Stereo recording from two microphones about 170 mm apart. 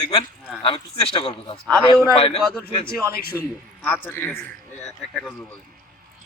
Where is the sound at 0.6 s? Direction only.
30° left (ahead or behind).